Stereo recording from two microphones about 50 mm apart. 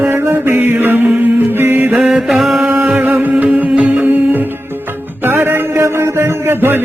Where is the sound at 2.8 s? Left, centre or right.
Right.